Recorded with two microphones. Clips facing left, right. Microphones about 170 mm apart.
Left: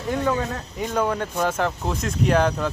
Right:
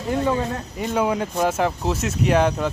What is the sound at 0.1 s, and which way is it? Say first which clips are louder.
A man's voice: right 2 dB; 5° right (ahead or behind).